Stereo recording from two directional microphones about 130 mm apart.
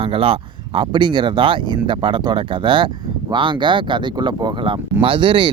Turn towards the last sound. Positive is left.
turn(degrees=-40)  # may be behind; listen again after turning